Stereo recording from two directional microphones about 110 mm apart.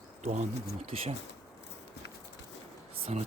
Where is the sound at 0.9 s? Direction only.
60° right (ahead or behind).